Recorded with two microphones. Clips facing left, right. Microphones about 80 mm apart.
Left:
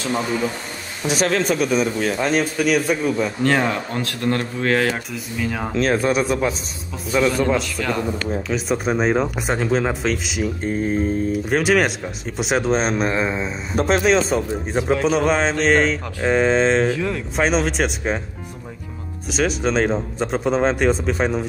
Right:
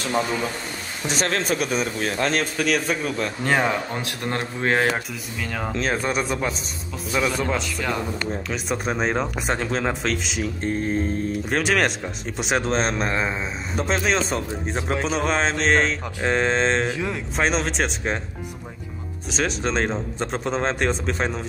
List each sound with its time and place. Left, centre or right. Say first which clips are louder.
1.0 s speech: left 5 dB; centre
3.4 s speech: left 1 dB; centre; by 5.0 s right
5.1 s speech: left 5 dB; centre
16.9 s speech: left 4 dB; centre
17.4 s speech: left 3 dB; centre
19.3 s speech: left 4 dB; centre